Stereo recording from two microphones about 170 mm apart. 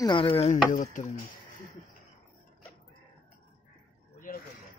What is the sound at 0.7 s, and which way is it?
Speech, 45° left (ahead or behind).